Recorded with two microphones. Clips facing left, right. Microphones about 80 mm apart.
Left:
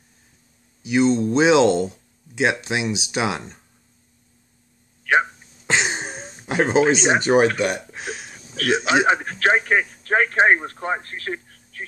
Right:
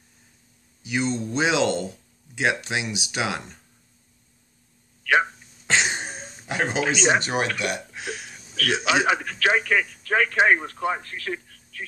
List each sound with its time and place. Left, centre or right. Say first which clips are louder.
0.8 s speech: left 8 dB; left
5.7 s a sound: left 2 dB; centre
7.2 s speech: left 8 dB; left